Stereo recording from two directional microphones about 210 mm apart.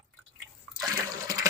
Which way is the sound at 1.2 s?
15° right (ahead or behind).